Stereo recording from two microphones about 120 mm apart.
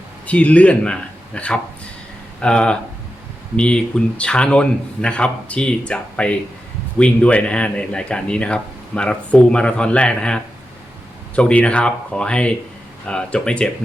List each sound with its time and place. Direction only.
0.3 s speech: 10° left (ahead or behind)